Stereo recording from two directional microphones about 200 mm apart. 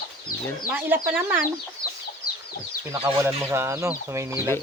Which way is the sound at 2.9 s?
10° right (ahead or behind).